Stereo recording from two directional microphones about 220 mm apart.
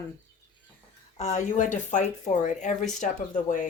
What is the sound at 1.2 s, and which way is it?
Speech, 30° left (ahead or behind).